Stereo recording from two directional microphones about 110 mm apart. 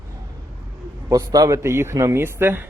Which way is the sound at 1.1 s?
30° right (ahead or behind).